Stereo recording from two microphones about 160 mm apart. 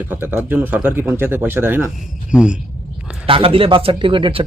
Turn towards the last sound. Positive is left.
turn(degrees=-35)  # may be behind; listen again after turning